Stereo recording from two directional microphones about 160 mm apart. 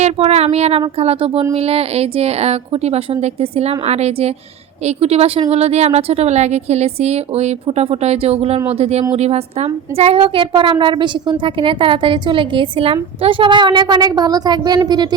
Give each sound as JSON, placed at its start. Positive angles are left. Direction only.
{"t": 0.0, "sound": "a woman's voice", "side_deg": -40}